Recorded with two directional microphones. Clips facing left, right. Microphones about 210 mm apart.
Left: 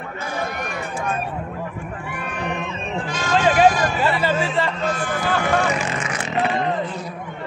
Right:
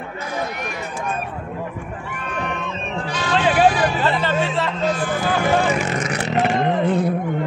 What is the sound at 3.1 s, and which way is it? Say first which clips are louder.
Vehicle: left 1 dB; 45° left (ahead or behind).